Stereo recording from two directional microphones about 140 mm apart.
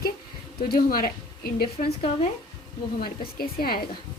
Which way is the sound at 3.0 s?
90° left.